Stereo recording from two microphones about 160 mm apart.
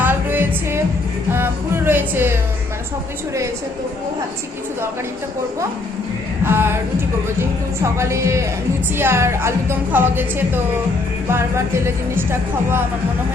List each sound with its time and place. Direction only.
0.0 s music: 10° right (ahead or behind)
1.3 s a woman's voice: 15° right (ahead or behind)
6.4 s a woman's voice: 15° right (ahead or behind)